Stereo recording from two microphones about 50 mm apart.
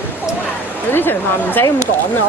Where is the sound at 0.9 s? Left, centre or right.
Left.